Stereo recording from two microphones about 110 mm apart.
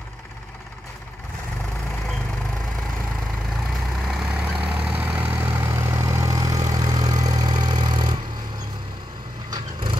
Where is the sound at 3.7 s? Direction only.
Centre (ahead or behind); by 8.6 s 40° right (ahead or behind).